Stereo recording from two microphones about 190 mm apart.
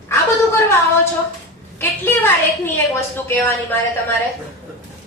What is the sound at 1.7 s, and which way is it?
Speech, 10° left (ahead or behind).